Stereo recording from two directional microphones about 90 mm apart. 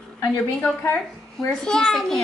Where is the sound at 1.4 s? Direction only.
5° left (ahead or behind).